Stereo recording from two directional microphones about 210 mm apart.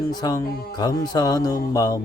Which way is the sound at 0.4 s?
45° left (ahead or behind).